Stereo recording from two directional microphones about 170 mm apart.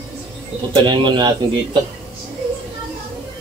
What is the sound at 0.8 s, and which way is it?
Speech, 25° right (ahead or behind).